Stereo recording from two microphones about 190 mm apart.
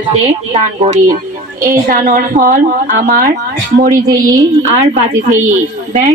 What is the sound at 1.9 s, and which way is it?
A woman's voice, 50° right (ahead or behind).